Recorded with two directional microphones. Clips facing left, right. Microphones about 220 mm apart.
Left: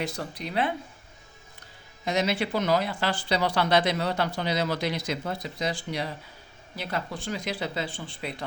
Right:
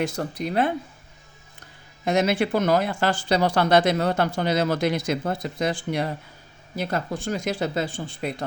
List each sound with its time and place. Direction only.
0.0 s speech: 45° right (ahead or behind)
2.0 s speech: 50° right (ahead or behind)